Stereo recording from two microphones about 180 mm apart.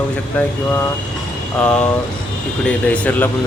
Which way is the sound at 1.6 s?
5° left (ahead or behind).